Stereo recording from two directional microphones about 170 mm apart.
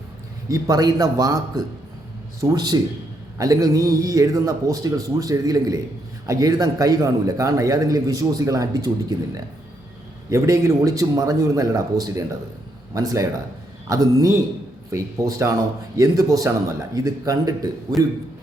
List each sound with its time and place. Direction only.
0.4 s a man's voice: 20° right (ahead or behind)
10.2 s a man's voice: 20° right (ahead or behind)